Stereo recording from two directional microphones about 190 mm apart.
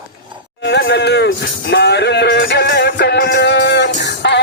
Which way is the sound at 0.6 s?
70° left (ahead or behind).